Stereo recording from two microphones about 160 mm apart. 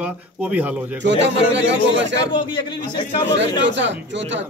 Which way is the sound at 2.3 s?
30° left (ahead or behind).